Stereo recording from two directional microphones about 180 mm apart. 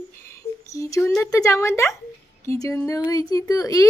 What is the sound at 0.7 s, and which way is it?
A child's voice, 15° left (ahead or behind).